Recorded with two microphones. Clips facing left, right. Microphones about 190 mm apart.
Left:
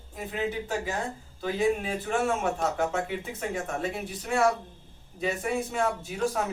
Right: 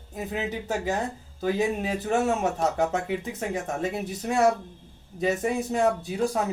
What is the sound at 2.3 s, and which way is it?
Speech, 40° right (ahead or behind).